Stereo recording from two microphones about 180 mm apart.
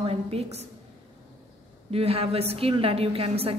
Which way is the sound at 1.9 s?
35° right (ahead or behind).